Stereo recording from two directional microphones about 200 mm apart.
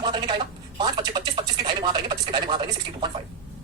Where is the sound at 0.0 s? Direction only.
20° right (ahead or behind).